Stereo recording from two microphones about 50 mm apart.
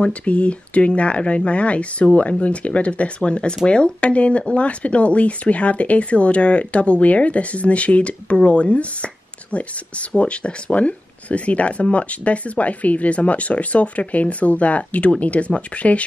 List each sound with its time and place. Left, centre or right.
0.0 s speech: left